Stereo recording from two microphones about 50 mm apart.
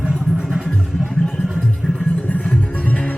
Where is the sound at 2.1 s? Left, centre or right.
Left.